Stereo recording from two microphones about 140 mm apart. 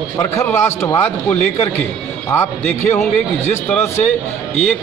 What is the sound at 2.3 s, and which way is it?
Speech, 15° left (ahead or behind).